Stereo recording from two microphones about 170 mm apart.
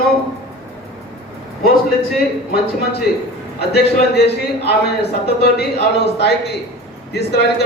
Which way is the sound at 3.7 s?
75° left (ahead or behind).